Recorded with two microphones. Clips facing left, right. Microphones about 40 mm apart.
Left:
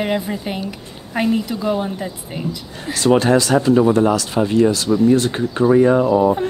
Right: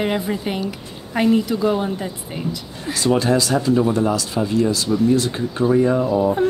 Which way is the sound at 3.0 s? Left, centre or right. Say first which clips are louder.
Left 4 dB; left.